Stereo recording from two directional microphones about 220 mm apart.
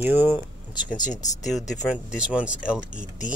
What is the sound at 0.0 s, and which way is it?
Speech, 10° right (ahead or behind).